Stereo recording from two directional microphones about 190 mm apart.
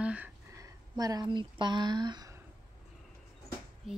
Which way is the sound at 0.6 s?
20° right (ahead or behind).